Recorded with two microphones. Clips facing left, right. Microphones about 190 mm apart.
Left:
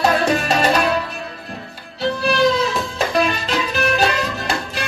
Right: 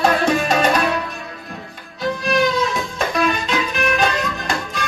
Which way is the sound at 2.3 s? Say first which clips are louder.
Left 1 dB; 35° left (ahead or behind).